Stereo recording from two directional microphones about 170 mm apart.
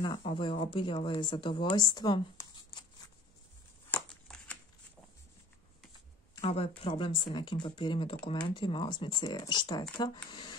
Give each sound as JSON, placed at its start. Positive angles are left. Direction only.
{"t": 0.0, "sound": "speech", "side_deg": 30}
{"t": 3.9, "sound": "a sound", "side_deg": 5}
{"t": 6.3, "sound": "speech", "side_deg": 35}